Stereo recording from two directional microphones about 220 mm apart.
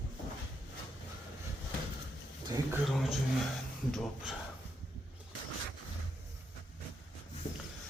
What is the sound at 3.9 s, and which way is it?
Speech, centre (ahead or behind).